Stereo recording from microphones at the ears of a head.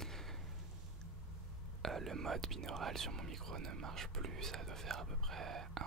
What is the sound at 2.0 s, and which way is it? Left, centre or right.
Speech, right.